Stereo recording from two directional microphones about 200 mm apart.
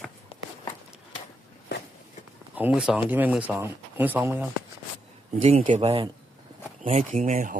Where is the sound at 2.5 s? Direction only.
5° right (ahead or behind).